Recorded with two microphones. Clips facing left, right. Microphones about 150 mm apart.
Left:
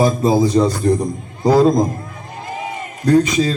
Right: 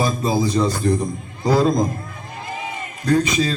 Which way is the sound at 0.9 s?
25° left (ahead or behind).